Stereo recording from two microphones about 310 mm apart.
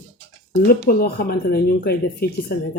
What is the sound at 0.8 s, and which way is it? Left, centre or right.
Speech, left.